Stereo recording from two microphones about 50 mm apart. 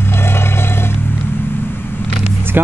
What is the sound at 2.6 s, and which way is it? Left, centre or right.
Speech, right.